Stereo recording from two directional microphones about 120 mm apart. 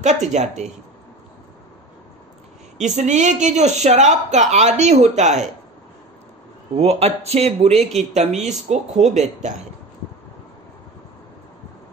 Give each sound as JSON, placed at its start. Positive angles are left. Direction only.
{"t": 0.0, "sound": "speech", "side_deg": -75}
{"t": 2.8, "sound": "speech", "side_deg": -80}
{"t": 6.8, "sound": "speech", "side_deg": -60}